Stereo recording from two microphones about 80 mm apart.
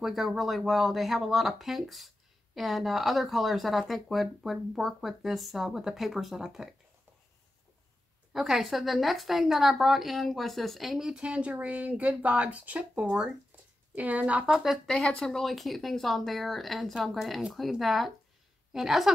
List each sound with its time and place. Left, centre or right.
0.0 s speech: centre
8.3 s speech: centre
14.9 s a woman's voice: centre